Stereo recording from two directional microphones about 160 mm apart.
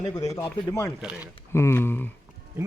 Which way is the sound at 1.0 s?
10° right (ahead or behind).